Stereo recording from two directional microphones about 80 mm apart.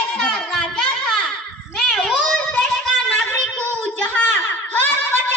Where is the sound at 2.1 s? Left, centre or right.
Centre; by 5.2 s left.